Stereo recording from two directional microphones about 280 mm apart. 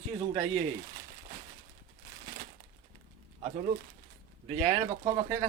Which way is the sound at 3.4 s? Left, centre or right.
Right.